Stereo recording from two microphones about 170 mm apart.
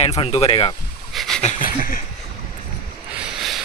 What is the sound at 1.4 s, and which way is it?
Speech, 45° left (ahead or behind).